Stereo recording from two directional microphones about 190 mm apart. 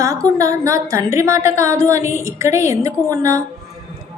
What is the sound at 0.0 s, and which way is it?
A woman's voice, 15° right (ahead or behind).